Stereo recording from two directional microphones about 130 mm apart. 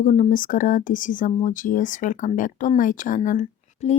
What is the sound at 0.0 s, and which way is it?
Speech, 75° left (ahead or behind).